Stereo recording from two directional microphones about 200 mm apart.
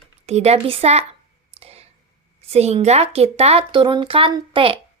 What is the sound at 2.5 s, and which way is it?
A woman's voice, 30° right (ahead or behind).